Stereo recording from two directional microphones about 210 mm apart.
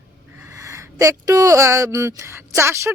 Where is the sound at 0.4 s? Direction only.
15° right (ahead or behind).